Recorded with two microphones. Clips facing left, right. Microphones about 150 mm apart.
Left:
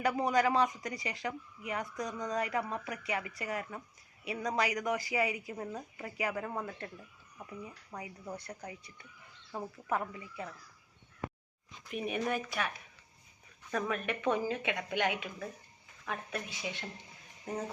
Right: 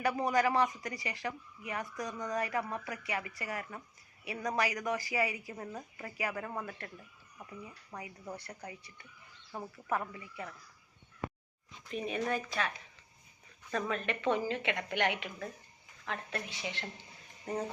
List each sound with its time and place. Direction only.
0.2 s speech: 15° left (ahead or behind)
6.4 s a man's voice: 5° left (ahead or behind)
6.7 s speech: 20° left (ahead or behind)
7.9 s a man's voice: centre (ahead or behind)
8.4 s speech: 20° left (ahead or behind)
11.9 s a woman's voice: 10° left (ahead or behind)